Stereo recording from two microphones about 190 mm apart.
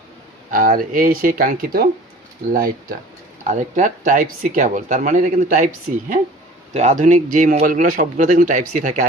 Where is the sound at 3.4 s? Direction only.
40° right (ahead or behind).